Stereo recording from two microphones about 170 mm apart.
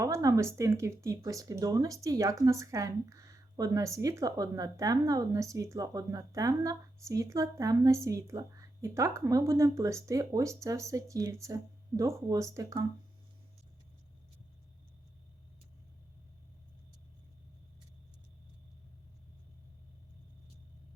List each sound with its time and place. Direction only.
0.0 s speech: 20° right (ahead or behind)